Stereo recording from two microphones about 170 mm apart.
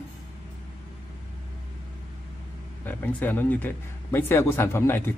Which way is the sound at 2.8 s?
10° left (ahead or behind).